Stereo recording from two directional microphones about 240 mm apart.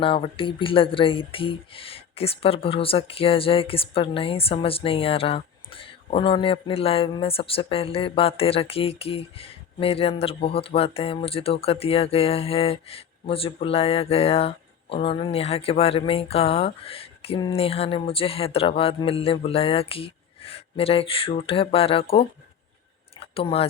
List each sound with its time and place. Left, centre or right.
0.0 s speech: left